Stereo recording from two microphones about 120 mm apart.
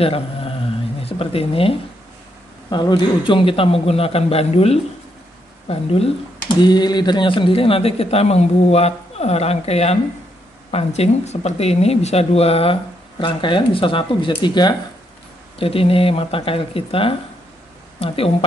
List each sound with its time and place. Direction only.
0.0 s mantra: 50° left (ahead or behind)
1.0 s speech: 55° left (ahead or behind)
2.7 s a man's voice: 40° left (ahead or behind); by 6.1 s 55° left (ahead or behind)
6.6 s speech: 35° left (ahead or behind); by 12.7 s 55° left (ahead or behind)
13.2 s a man's voice: 40° left (ahead or behind)
15.6 s a man's voice: 50° left (ahead or behind)